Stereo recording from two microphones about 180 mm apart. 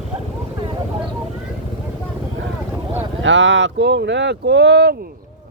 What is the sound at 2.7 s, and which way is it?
Boat, 10° right (ahead or behind).